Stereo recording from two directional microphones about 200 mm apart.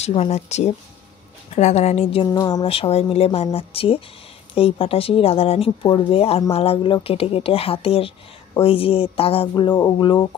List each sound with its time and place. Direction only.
0.0 s speech: 30° left (ahead or behind)
2.3 s speech: 20° left (ahead or behind)